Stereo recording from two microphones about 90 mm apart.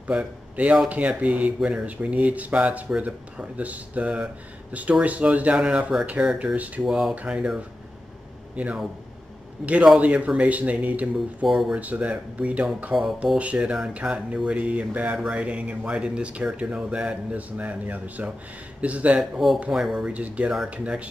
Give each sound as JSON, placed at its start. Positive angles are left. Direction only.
{"t": 0.0, "sound": "speech", "side_deg": -15}
{"t": 6.9, "sound": "speech", "side_deg": -5}
{"t": 9.9, "sound": "speech", "side_deg": -15}
{"t": 11.4, "sound": "speech", "side_deg": 0}
{"t": 11.7, "sound": "speech", "side_deg": -15}
{"t": 19.1, "sound": "speech", "side_deg": 0}